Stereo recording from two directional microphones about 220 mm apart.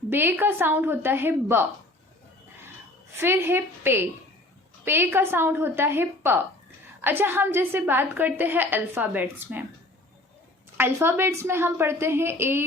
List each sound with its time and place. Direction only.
0.1 s a woman's voice: 10° right (ahead or behind)
3.2 s a woman's voice: 10° right (ahead or behind)
10.8 s a woman's voice: 10° right (ahead or behind)